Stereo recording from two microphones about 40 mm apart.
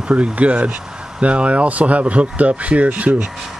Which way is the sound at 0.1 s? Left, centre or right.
Right.